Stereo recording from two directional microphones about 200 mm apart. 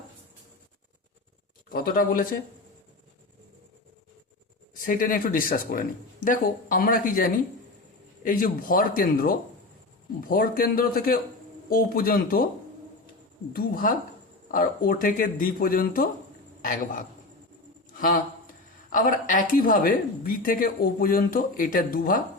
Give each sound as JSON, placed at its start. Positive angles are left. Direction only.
{"t": 1.7, "sound": "speech", "side_deg": 45}
{"t": 4.7, "sound": "speech", "side_deg": 45}
{"t": 13.5, "sound": "a man's voice", "side_deg": 45}
{"t": 18.0, "sound": "speech", "side_deg": 45}